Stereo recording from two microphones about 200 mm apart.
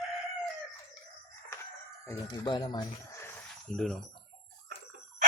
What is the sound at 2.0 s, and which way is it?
Speech, 20° left (ahead or behind).